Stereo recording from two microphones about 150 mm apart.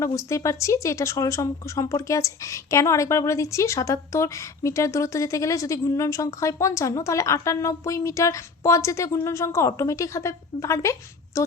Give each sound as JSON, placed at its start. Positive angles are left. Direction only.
{"t": 0.0, "sound": "a woman's voice", "side_deg": 20}